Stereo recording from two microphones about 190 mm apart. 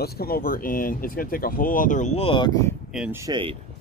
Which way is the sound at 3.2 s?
25° right (ahead or behind).